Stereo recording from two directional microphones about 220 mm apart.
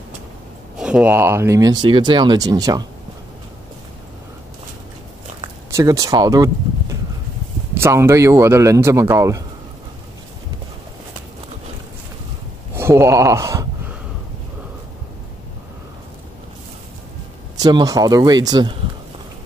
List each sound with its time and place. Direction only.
0.7 s speech: 5° right (ahead or behind)
5.7 s speech: 15° right (ahead or behind)
7.7 s speech: 10° right (ahead or behind)
12.7 s speech: 10° right (ahead or behind)
17.6 s speech: 15° right (ahead or behind)